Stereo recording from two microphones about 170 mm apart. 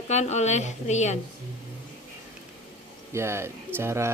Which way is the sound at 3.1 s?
15° right (ahead or behind).